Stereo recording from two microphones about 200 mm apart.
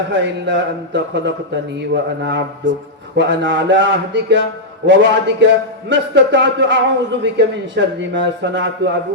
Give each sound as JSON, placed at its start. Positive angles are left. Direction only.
{"t": 0.1, "sound": "a man's voice", "side_deg": -60}